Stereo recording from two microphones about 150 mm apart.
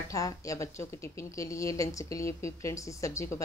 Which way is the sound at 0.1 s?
20° left (ahead or behind).